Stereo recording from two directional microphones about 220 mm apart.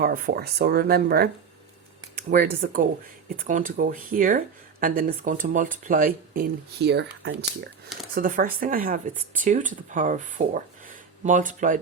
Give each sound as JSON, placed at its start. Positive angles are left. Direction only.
{"t": 0.0, "sound": "speech", "side_deg": -45}
{"t": 8.1, "sound": "speech", "side_deg": -40}